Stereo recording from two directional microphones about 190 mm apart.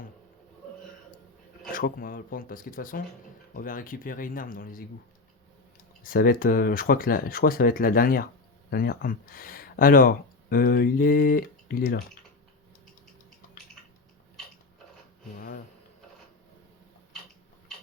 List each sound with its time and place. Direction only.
1.7 s speech: 50° left (ahead or behind)
6.0 s speech: 50° left (ahead or behind)
15.4 s a sound: 50° left (ahead or behind)